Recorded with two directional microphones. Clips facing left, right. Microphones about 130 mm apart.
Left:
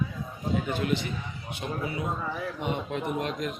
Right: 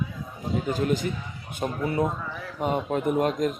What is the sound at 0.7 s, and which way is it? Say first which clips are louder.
A man's voice: right 3 dB; 40° right (ahead or behind).